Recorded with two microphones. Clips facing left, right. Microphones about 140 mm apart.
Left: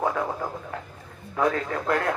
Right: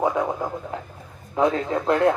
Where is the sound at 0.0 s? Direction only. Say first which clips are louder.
Right 4 dB; 20° right (ahead or behind).